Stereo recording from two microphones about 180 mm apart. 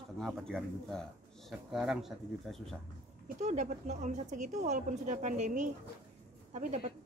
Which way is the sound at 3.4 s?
40° right (ahead or behind).